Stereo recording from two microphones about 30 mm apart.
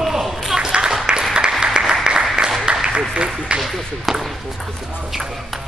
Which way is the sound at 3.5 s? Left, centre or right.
Right.